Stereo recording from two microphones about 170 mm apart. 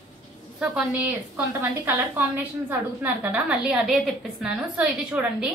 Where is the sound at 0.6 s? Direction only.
10° right (ahead or behind).